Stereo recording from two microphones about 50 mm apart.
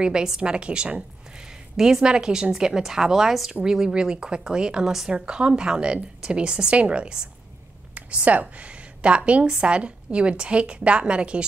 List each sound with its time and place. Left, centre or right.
0.0 s a woman's voice: centre